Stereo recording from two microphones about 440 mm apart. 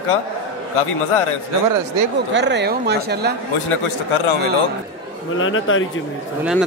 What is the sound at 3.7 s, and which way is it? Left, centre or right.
Speech, left.